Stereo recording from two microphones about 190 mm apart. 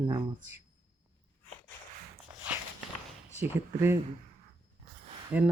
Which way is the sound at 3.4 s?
15° right (ahead or behind).